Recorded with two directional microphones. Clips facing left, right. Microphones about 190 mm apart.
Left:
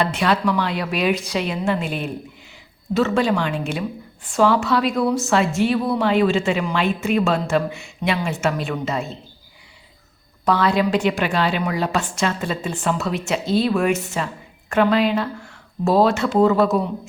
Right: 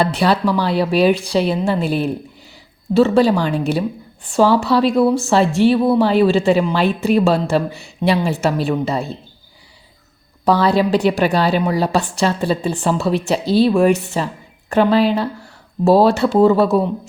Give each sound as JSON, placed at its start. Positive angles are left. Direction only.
{"t": 0.0, "sound": "speech", "side_deg": -35}
{"t": 10.4, "sound": "speech", "side_deg": -35}